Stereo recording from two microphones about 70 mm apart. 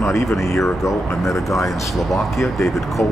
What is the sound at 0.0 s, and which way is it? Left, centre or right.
Speech, left.